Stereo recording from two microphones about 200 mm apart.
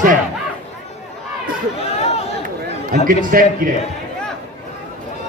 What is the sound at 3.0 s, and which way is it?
Speech, 45° right (ahead or behind).